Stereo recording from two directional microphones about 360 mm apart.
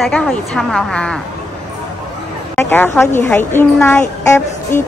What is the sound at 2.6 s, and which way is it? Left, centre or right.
A woman's voice, centre.